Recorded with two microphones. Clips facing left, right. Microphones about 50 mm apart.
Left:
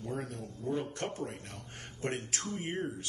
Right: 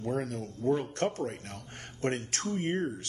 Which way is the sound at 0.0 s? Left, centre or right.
Right.